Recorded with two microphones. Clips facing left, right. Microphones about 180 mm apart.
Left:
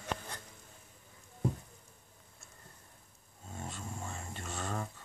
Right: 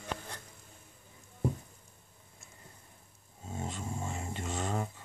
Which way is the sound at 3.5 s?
20° right (ahead or behind).